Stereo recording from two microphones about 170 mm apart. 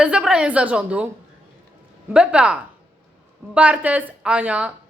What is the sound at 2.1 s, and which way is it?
A woman's voice, 5° right (ahead or behind).